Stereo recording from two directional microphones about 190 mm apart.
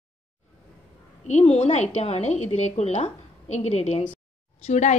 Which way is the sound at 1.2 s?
35° left (ahead or behind).